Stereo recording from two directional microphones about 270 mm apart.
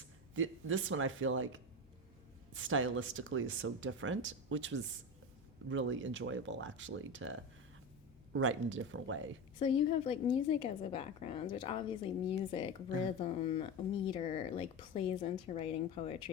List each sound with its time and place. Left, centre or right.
0.3 s speech: right
9.6 s speech: centre